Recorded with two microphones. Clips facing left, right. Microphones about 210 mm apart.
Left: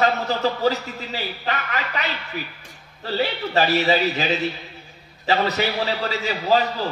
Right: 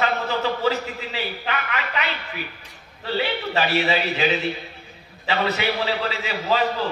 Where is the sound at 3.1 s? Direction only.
40° left (ahead or behind).